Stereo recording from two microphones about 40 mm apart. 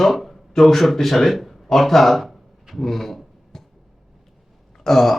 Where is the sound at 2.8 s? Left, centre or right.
Centre.